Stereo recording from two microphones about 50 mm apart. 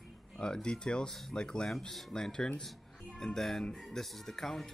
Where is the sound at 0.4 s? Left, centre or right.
Centre.